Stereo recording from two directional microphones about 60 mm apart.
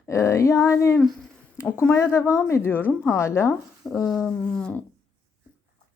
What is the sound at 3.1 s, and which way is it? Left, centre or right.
Speech, left.